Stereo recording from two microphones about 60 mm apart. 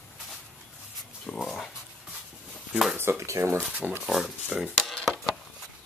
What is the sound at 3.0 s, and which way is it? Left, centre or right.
Speech, right.